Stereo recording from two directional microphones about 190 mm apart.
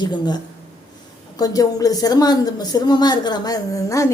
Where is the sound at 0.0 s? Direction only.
25° left (ahead or behind).